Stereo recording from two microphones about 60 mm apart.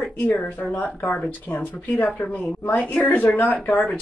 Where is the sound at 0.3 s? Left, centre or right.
Left.